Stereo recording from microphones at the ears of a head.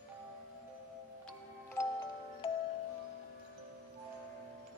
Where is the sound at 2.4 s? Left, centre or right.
Left.